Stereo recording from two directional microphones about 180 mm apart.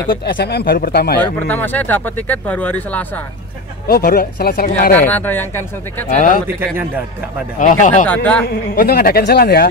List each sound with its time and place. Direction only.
0.1 s speech: 65° left (ahead or behind)
1.2 s speech: 10° left (ahead or behind)
3.8 s speech: 55° left (ahead or behind)
4.9 s speech: 10° left (ahead or behind)
6.0 s speech: 45° left (ahead or behind)
7.5 s speech: 45° left (ahead or behind)
8.1 s speech: 10° left (ahead or behind)
8.7 s speech: 55° left (ahead or behind)